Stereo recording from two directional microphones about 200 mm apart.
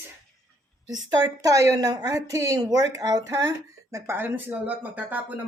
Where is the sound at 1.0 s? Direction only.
15° right (ahead or behind).